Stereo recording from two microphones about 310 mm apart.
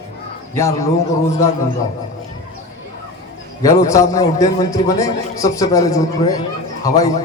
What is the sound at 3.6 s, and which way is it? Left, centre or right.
A man's voice, centre.